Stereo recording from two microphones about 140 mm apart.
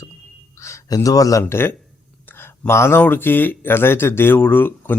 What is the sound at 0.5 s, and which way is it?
A man's voice, 20° left (ahead or behind).